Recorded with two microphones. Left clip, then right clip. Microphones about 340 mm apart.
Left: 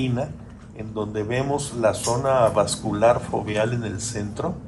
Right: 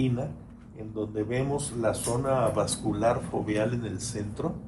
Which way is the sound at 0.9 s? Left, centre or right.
Left.